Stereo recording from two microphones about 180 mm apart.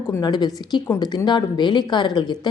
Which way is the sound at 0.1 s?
25° left (ahead or behind).